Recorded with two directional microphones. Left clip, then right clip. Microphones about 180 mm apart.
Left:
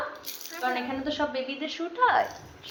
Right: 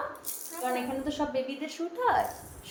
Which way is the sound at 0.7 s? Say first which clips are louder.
Left 2 dB; centre (ahead or behind).